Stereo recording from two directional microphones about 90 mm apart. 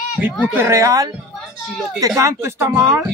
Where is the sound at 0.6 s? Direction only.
35° right (ahead or behind).